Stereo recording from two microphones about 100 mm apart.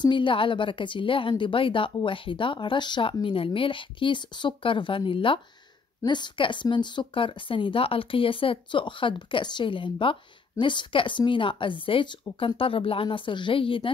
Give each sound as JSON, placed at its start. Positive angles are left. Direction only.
{"t": 0.0, "sound": "a woman's voice", "side_deg": 55}